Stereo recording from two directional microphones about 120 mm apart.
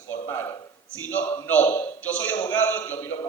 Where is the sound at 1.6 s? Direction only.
20° left (ahead or behind).